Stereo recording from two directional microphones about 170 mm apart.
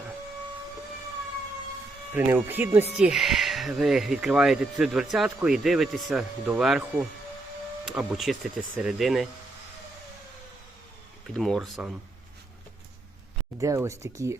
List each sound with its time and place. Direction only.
2.1 s speech: 15° right (ahead or behind)
11.3 s speech: centre (ahead or behind)
13.6 s speech: 20° right (ahead or behind)